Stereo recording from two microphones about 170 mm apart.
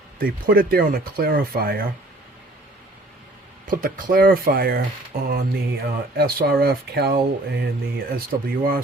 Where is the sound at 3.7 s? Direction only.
55° right (ahead or behind); by 7.7 s 75° right (ahead or behind).